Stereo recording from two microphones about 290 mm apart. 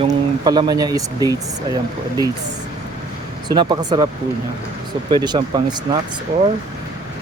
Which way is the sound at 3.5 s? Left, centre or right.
Centre.